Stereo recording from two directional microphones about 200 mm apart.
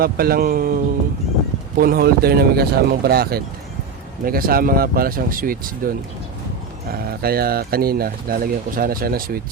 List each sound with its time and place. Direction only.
0.0 s speech: 50° right (ahead or behind)
1.8 s speech: 50° right (ahead or behind)
6.9 s speech: 50° right (ahead or behind)